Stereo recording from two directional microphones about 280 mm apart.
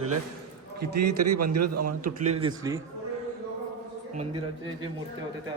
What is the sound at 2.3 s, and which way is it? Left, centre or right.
Speech, centre.